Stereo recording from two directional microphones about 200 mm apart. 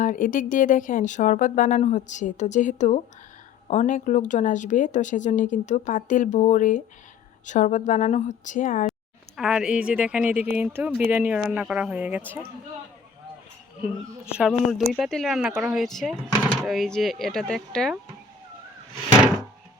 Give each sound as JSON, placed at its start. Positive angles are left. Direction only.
{"t": 0.0, "sound": "speech", "side_deg": 40}
{"t": 8.9, "sound": "speech", "side_deg": 0}
{"t": 14.3, "sound": "speech", "side_deg": 0}